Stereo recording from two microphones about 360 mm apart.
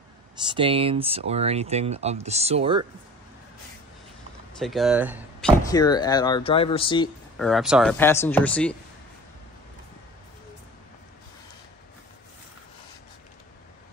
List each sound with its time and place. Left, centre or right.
0.4 s speech: centre
4.6 s speech: centre
5.6 s speech: centre
7.3 s speech: centre